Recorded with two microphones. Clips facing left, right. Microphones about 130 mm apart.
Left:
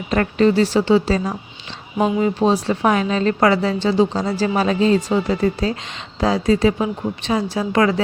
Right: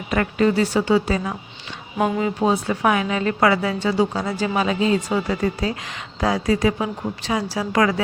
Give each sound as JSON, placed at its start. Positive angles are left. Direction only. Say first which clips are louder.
{"t": 0.2, "sound": "a woman's voice", "louder": "left 3 dB", "side_deg": 30}
{"t": 2.0, "sound": "speech", "louder": "left 3 dB", "side_deg": 15}
{"t": 2.2, "sound": "a woman's voice", "louder": "left 3 dB", "side_deg": 30}